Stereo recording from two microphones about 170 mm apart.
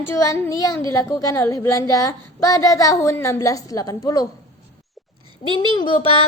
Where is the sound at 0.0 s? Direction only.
15° left (ahead or behind).